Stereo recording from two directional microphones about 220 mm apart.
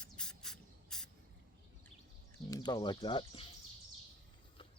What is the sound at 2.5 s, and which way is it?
Speech, 15° left (ahead or behind).